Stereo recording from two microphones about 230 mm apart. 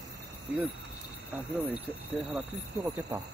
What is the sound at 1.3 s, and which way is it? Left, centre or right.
Speech, centre.